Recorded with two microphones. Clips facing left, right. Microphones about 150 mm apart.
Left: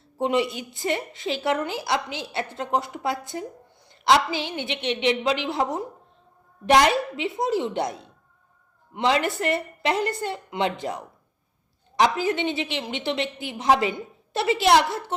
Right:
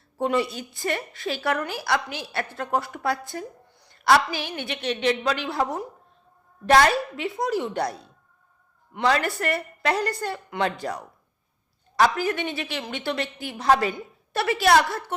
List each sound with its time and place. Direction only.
0.2 s a woman's voice: 20° left (ahead or behind)